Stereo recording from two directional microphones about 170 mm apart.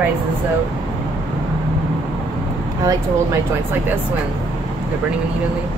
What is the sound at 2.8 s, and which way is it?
Speech, 20° right (ahead or behind).